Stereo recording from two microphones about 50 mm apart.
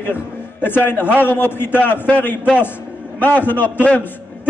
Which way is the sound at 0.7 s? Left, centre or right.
Left.